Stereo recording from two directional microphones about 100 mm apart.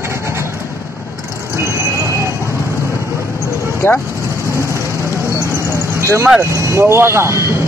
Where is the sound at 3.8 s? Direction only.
20° left (ahead or behind).